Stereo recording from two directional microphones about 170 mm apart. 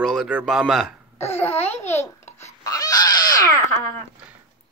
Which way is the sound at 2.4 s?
20° left (ahead or behind).